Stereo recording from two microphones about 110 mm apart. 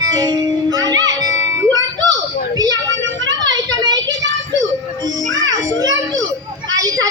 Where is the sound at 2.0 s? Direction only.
35° right (ahead or behind).